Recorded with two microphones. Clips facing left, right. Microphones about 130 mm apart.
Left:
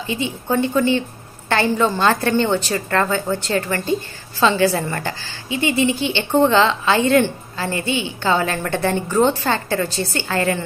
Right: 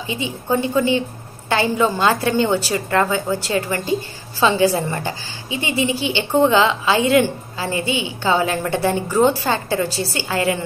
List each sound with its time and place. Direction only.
0.0 s a woman's voice: 15° right (ahead or behind)